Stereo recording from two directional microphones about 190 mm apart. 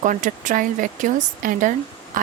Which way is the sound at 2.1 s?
45° right (ahead or behind).